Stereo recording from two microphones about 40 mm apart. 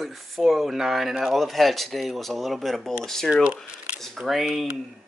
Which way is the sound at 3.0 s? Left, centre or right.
Centre.